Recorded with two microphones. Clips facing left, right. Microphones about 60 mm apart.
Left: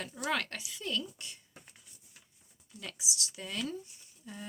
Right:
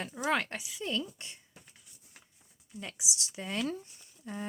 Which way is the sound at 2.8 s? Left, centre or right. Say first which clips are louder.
Even; right.